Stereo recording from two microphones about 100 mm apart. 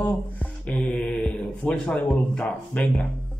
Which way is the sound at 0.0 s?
15° left (ahead or behind).